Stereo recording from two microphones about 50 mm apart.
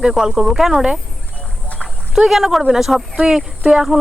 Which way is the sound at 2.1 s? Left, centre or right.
Centre.